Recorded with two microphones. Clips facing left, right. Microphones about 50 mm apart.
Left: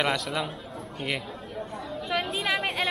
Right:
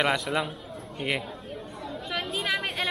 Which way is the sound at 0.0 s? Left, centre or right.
Centre.